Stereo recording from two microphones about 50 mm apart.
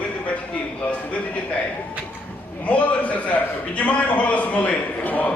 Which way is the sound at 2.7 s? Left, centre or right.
Left.